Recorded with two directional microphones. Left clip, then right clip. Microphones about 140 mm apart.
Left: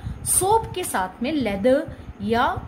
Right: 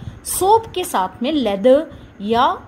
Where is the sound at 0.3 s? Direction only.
30° right (ahead or behind).